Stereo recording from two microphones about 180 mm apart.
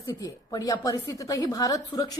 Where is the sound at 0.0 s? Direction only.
20° left (ahead or behind).